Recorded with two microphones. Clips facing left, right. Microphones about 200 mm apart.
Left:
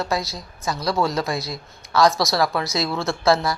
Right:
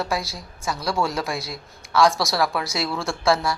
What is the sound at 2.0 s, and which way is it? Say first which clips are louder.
Speech: left 3 dB; 30° right (ahead or behind).